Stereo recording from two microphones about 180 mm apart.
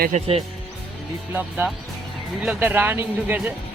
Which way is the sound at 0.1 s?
35° right (ahead or behind).